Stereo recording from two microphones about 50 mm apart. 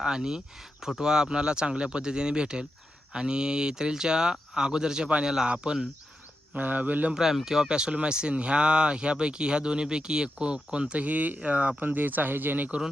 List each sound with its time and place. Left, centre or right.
0.0 s speech: centre
6.5 s speech: right
7.1 s speech: centre
11.0 s speech: right
11.8 s speech: right